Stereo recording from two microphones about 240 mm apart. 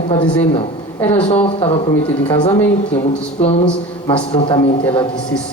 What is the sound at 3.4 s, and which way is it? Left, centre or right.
Speech, left.